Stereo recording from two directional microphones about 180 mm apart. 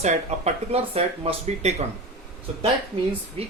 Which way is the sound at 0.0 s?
40° right (ahead or behind).